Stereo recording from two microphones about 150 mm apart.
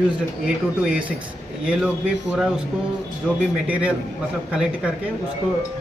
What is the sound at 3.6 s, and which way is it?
A man's voice, 10° right (ahead or behind).